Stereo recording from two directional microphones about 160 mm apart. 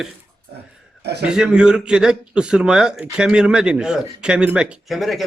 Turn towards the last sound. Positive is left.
turn(degrees=0)  # may be behind; listen again after turning